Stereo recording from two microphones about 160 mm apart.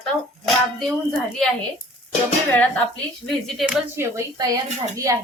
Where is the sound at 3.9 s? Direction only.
20° right (ahead or behind).